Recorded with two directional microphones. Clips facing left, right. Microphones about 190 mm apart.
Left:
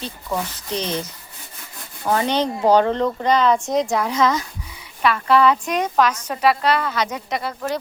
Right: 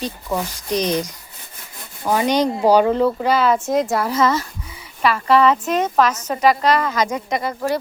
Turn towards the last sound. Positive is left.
turn(degrees=-15)  # may be behind; listen again after turning